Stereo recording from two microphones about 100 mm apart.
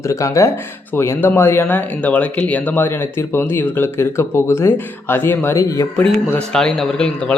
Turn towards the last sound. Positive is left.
turn(degrees=10)  # may be behind; listen again after turning